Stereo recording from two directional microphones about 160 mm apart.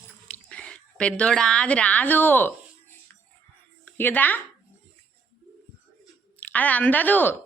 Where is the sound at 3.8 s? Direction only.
10° left (ahead or behind).